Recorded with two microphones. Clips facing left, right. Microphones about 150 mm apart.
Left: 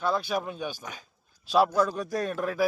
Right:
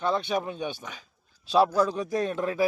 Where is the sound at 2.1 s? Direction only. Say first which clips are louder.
Right 2 dB; 20° right (ahead or behind).